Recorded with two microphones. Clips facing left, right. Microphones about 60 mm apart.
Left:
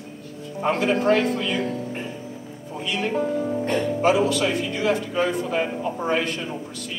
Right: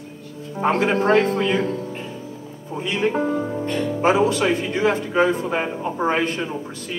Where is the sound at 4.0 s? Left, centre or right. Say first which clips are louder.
Right 3 dB; right.